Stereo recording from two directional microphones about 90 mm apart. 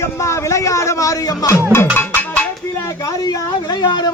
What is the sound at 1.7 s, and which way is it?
Music, 25° left (ahead or behind).